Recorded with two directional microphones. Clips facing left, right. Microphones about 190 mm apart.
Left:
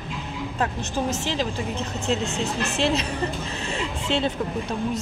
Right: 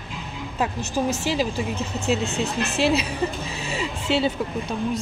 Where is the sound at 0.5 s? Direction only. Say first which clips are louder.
Right 2 dB; 10° right (ahead or behind).